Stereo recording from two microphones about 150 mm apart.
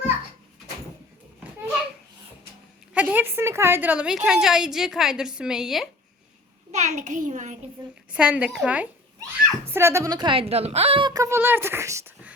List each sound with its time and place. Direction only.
2.9 s a woman's voice: 10° right (ahead or behind)
6.7 s a child's voice: 50° right (ahead or behind)
8.1 s a child's voice: 10° right (ahead or behind); by 11.1 s 40° right (ahead or behind)
11.1 s speech: 20° right (ahead or behind)